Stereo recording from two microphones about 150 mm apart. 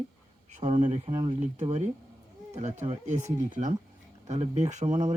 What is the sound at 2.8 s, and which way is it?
Speech, 55° right (ahead or behind).